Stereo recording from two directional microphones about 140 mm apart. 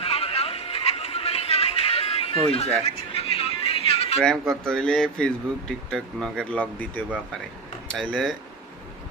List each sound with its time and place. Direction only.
0.0 s a sound: 45° left (ahead or behind)
3.3 s music: 45° left (ahead or behind)
4.2 s speech: 5° left (ahead or behind)